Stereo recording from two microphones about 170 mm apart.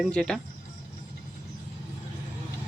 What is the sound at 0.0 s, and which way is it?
Speech, 5° left (ahead or behind).